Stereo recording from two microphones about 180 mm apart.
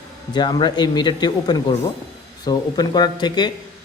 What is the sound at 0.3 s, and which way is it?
Speech, 25° left (ahead or behind).